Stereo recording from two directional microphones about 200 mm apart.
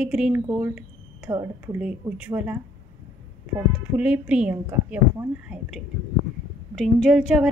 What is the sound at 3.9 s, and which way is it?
A woman's voice, 5° right (ahead or behind).